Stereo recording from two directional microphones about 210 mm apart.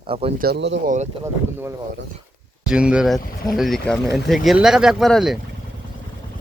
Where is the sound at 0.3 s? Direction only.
50° right (ahead or behind).